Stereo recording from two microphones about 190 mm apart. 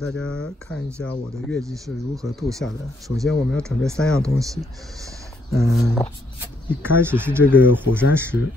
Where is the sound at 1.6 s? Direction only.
15° right (ahead or behind).